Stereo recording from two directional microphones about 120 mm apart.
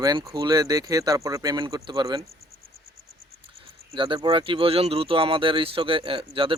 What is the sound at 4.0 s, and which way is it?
Speech, 45° right (ahead or behind).